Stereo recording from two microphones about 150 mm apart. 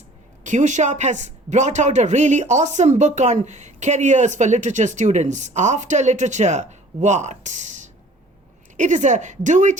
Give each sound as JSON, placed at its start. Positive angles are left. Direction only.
{"t": 0.4, "sound": "a man's voice", "side_deg": -55}